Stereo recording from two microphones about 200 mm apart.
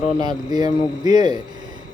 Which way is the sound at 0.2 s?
20° right (ahead or behind).